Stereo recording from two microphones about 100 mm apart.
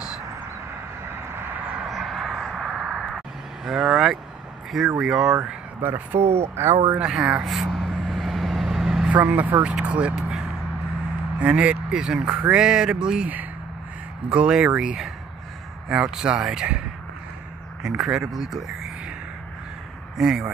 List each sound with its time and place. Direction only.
1.0 s vehicle: 20° right (ahead or behind)
1.9 s a sound: centre (ahead or behind)
3.6 s speech: 5° right (ahead or behind)
5.8 s speech: 20° right (ahead or behind)
6.1 s speech: 90° right
6.4 s speech: 25° right (ahead or behind)
7.1 s vehicle: 5° right (ahead or behind)
9.1 s speech: 15° right (ahead or behind)
17.8 s speech: 5° right (ahead or behind)
20.2 s speech: 5° right (ahead or behind)